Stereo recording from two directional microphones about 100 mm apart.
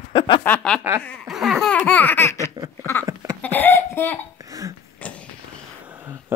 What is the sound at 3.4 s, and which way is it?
Laughter, 20° left (ahead or behind).